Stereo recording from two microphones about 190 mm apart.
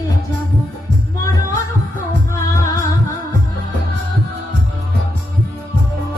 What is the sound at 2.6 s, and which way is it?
Music, 15° left (ahead or behind).